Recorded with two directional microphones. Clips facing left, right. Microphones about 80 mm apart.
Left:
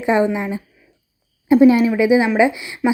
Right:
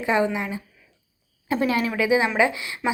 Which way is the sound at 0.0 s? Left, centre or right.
Left.